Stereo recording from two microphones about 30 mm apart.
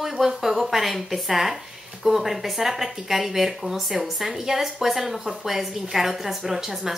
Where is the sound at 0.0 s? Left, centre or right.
Centre.